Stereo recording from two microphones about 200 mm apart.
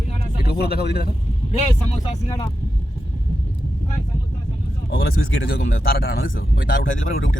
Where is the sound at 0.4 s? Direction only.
50° left (ahead or behind).